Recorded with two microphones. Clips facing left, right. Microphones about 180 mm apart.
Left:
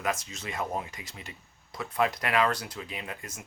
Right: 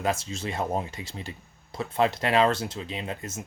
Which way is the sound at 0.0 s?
30° right (ahead or behind).